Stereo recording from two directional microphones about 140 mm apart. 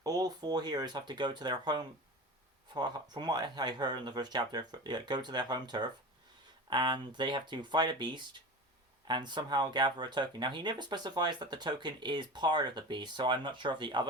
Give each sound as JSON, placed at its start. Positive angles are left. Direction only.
{"t": 0.0, "sound": "speech", "side_deg": -25}